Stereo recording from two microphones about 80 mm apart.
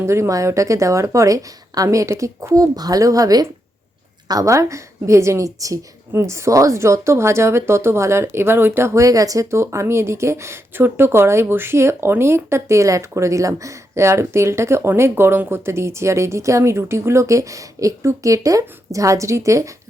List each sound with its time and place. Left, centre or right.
0.0 s a woman's voice: right
2.7 s a woman's voice: right